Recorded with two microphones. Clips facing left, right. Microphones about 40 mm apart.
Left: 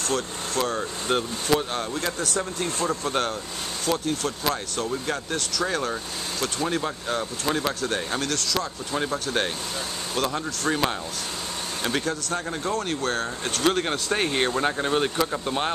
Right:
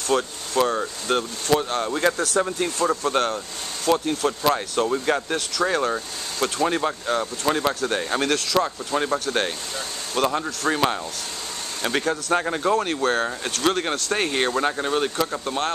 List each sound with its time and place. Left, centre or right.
0.1 s speech: right
0.7 s speech: centre
1.9 s speech: centre
3.0 s speech: centre
8.2 s speech: right
8.9 s speech: centre
12.3 s speech: right
12.7 s speech: centre